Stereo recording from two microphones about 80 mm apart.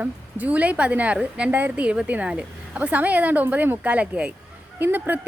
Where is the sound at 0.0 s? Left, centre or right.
Centre.